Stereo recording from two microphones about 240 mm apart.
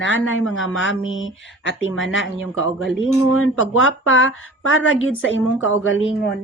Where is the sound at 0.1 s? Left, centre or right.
Left.